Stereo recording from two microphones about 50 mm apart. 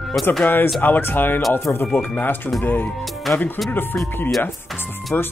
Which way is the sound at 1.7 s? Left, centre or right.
Left.